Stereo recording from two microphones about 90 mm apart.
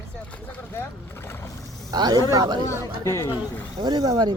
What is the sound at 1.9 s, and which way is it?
Speech, 45° right (ahead or behind).